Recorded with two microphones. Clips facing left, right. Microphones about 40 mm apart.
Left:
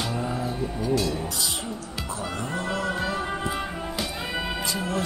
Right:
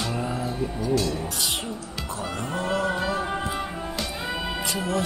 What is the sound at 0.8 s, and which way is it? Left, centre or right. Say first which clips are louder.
Speech: even; centre.